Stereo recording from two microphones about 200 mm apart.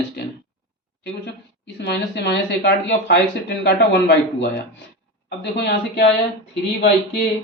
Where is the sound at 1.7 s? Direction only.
60° left (ahead or behind).